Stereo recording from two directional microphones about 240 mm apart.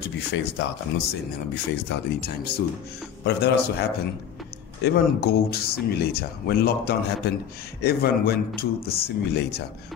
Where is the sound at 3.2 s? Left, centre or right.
Left.